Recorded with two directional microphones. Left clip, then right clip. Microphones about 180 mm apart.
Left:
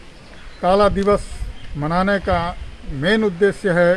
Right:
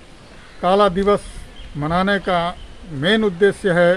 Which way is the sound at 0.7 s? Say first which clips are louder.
Even; 30° right (ahead or behind).